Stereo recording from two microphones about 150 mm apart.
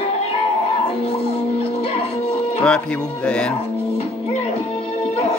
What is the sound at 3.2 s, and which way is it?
Music, 5° left (ahead or behind).